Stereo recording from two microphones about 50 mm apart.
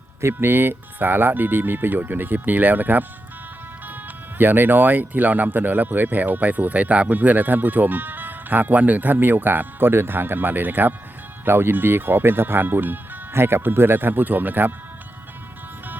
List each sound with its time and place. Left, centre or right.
0.3 s speech: right
4.4 s speech: right